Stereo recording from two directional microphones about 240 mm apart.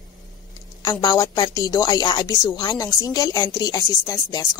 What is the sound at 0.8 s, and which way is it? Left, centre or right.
Speech, centre.